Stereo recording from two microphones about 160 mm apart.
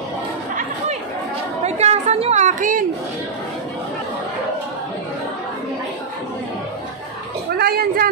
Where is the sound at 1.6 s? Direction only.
45° right (ahead or behind).